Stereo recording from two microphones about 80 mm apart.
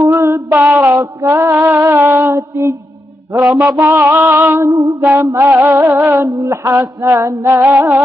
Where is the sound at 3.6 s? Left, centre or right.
Right.